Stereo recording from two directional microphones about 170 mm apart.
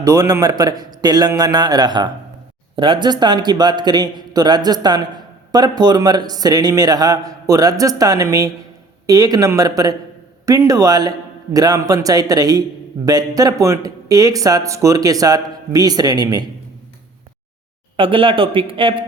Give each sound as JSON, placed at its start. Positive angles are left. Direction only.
{"t": 0.0, "sound": "a man's voice", "side_deg": -20}
{"t": 17.9, "sound": "speech", "side_deg": -30}